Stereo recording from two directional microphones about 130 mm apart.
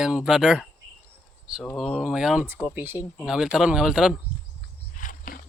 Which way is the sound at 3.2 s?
5° right (ahead or behind).